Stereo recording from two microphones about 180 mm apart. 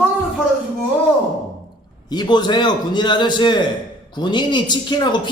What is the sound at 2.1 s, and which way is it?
A man's voice, 25° left (ahead or behind).